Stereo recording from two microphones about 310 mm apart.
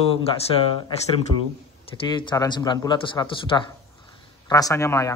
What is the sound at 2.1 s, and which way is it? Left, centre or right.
A man's voice, centre.